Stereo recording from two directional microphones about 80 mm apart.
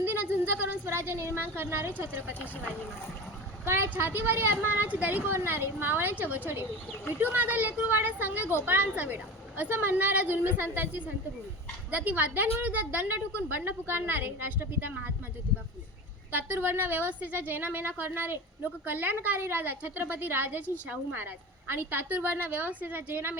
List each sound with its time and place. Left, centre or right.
0.0 s a woman's voice: right
3.7 s a woman's voice: right
16.3 s a woman's voice: right